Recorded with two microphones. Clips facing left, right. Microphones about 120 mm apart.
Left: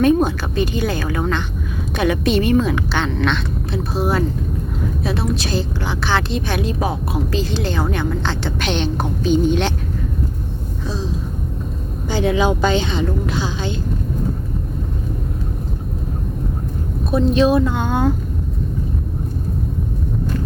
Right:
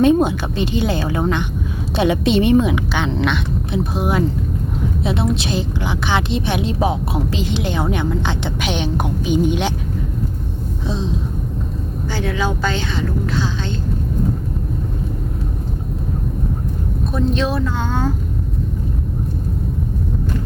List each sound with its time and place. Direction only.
0.0 s a woman's voice: 20° right (ahead or behind)
10.8 s a sound: 20° right (ahead or behind)
12.1 s a woman's voice: 20° left (ahead or behind)
17.1 s a woman's voice: 10° left (ahead or behind)